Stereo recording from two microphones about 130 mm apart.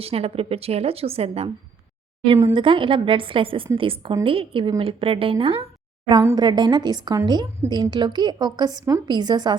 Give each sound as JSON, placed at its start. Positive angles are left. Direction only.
{"t": 0.0, "sound": "a woman's voice", "side_deg": -50}